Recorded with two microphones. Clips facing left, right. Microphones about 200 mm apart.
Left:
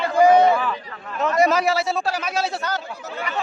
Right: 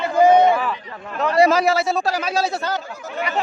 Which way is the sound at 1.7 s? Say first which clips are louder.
Right 2 dB; 45° right (ahead or behind).